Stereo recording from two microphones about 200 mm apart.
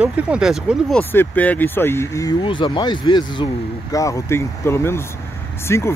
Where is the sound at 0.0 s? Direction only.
5° right (ahead or behind).